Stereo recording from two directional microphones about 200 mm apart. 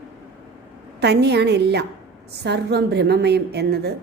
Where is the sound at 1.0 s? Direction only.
55° right (ahead or behind).